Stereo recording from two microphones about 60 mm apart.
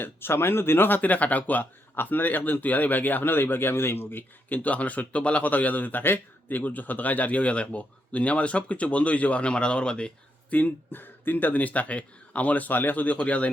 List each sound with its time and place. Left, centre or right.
0.0 s speech: left; by 10.1 s centre
10.5 s speech: left